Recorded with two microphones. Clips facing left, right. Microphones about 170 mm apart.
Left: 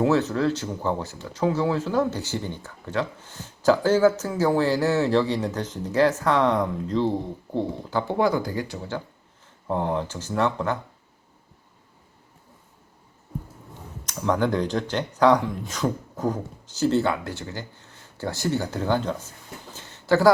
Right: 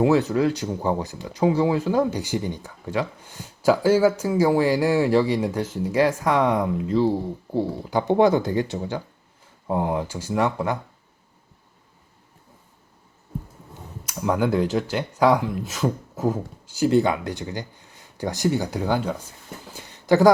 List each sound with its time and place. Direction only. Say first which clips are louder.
0.0 s speech: right 2 dB; 15° right (ahead or behind)
9.6 s speech: right 1 dB; 10° right (ahead or behind)
14.0 s speech: right 1 dB; 10° right (ahead or behind)
19.7 s a sound: right 2 dB; 15° right (ahead or behind)